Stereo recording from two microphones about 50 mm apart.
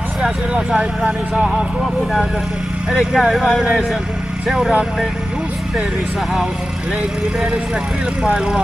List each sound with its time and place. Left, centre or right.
0.2 s speech: centre
2.9 s speech: centre
8.3 s speech: centre